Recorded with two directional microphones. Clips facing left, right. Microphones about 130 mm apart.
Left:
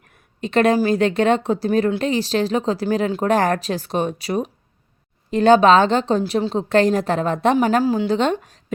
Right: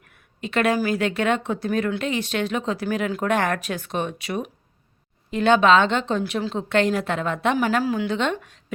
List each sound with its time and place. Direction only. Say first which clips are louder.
0.0 s a woman's voice: left 5 dB; 35° left (ahead or behind)